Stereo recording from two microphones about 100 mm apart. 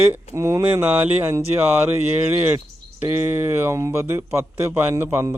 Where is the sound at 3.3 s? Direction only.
25° right (ahead or behind).